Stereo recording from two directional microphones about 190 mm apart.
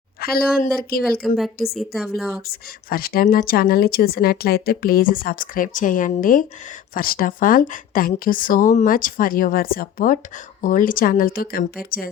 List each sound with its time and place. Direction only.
0.2 s a woman's voice: 50° left (ahead or behind)
1.7 s a woman's voice: centre (ahead or behind)
2.5 s a woman's voice: 50° left (ahead or behind)